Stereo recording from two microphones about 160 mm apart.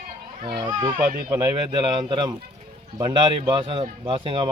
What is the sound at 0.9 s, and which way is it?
Speech, 70° right (ahead or behind).